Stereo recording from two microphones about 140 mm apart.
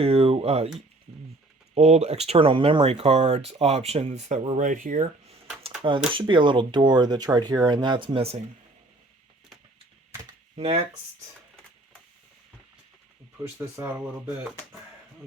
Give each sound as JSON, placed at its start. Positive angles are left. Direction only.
{"t": 0.0, "sound": "speech", "side_deg": -45}
{"t": 1.7, "sound": "speech", "side_deg": -50}
{"t": 4.5, "sound": "speech", "side_deg": -65}
{"t": 6.1, "sound": "speech", "side_deg": -35}
{"t": 10.6, "sound": "speech", "side_deg": -45}
{"t": 13.7, "sound": "speech", "side_deg": -15}